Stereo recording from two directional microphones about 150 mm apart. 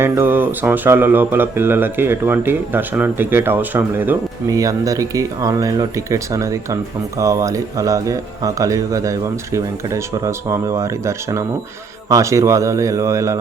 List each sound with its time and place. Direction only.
0.0 s speech: 15° right (ahead or behind)